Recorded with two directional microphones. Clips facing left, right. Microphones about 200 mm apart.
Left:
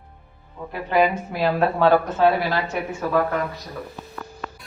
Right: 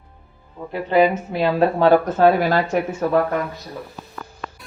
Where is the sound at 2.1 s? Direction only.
45° right (ahead or behind).